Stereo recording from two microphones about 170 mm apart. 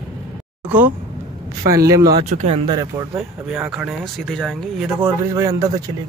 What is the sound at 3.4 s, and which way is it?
Speech, 5° right (ahead or behind).